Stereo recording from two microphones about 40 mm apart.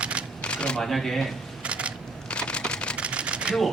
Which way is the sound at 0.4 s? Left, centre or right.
Left.